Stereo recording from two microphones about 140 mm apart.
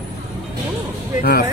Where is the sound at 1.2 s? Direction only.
90° left.